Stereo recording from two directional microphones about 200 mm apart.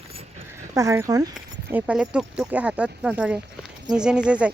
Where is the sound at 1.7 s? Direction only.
5° right (ahead or behind).